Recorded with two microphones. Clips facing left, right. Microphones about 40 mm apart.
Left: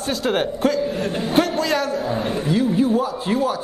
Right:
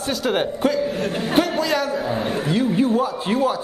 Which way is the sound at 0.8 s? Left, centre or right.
Right.